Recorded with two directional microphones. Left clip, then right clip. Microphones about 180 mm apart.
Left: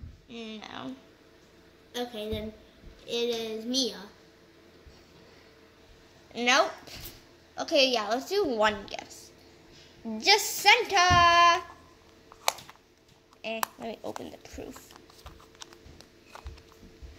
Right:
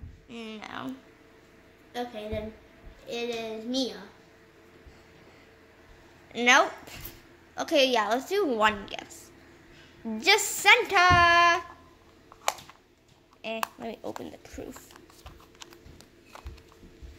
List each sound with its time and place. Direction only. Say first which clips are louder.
0.3 s speech: right 2 dB; centre (ahead or behind)
1.9 s child singing: even; 40° left (ahead or behind)
6.3 s a woman's voice: right 3 dB; 15° right (ahead or behind)
13.4 s a woman's voice: even; 10° right (ahead or behind)
15.2 s a sound: left 1 dB; 15° right (ahead or behind)